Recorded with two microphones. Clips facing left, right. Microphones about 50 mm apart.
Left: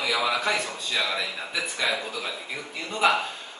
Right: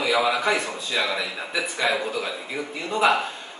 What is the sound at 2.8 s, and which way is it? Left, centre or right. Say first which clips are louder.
Speech: right 2 dB; centre.